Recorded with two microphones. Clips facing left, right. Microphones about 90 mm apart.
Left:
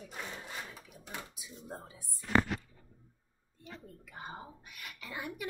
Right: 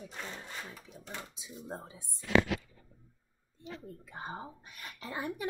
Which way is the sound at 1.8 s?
20° right (ahead or behind).